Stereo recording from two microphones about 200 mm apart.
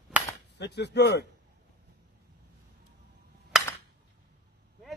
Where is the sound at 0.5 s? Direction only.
60° left (ahead or behind).